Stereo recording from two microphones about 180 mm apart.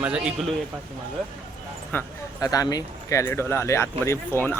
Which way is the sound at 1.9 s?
15° left (ahead or behind).